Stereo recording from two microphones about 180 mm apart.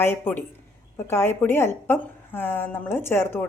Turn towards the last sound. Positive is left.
turn(degrees=10)  # may be behind; listen again after turning